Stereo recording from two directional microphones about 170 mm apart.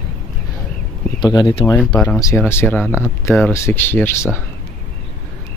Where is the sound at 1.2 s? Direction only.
25° left (ahead or behind).